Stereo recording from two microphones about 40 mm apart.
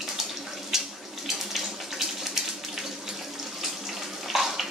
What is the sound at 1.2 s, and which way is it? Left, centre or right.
Water tap, centre.